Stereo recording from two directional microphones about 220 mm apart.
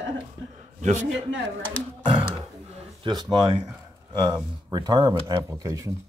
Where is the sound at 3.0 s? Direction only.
20° right (ahead or behind).